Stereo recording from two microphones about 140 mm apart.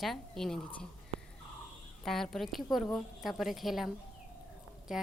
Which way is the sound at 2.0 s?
Centre (ahead or behind).